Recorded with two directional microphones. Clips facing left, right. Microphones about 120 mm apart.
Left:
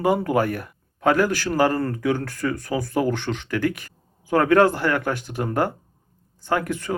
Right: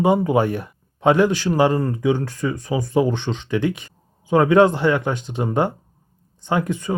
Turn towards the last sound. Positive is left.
turn(degrees=-15)  # may be behind; listen again after turning